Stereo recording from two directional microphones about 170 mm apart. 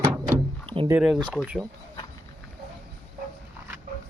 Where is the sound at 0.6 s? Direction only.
30° right (ahead or behind).